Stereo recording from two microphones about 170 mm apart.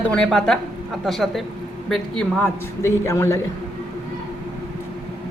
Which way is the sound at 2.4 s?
15° left (ahead or behind).